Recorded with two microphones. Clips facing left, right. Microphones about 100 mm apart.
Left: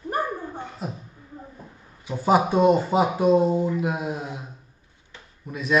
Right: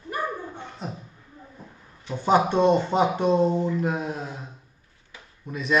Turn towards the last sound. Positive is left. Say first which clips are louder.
# even
turn(degrees=0)  # may be behind; listen again after turning